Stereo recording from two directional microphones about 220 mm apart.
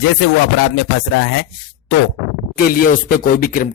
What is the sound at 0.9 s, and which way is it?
Speech, 60° left (ahead or behind).